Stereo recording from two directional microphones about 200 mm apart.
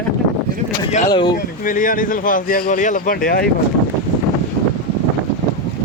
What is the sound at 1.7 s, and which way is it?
Speech, 40° left (ahead or behind).